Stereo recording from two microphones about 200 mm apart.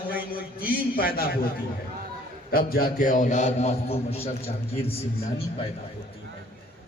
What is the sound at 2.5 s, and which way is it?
A man's voice, 50° left (ahead or behind).